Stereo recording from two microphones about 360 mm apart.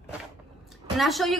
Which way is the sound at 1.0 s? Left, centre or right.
Centre.